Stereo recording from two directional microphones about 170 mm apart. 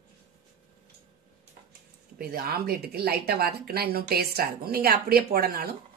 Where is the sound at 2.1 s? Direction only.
65° right (ahead or behind).